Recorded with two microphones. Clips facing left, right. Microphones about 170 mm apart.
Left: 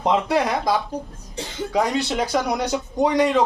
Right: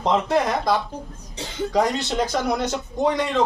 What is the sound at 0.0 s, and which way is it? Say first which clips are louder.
Speech: even; 10° left (ahead or behind).